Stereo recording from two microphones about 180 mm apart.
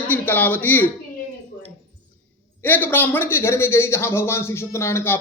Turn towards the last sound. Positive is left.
turn(degrees=15)  # may be behind; listen again after turning